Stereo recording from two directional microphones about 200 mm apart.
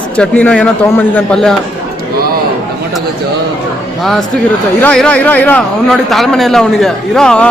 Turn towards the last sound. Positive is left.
turn(degrees=5)  # may be behind; listen again after turning